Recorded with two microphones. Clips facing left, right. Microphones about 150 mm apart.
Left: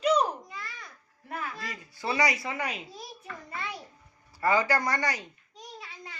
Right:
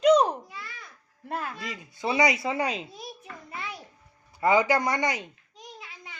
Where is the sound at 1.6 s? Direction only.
20° right (ahead or behind).